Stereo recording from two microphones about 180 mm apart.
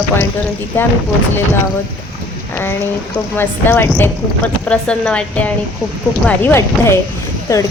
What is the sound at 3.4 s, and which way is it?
A woman's voice, 10° left (ahead or behind).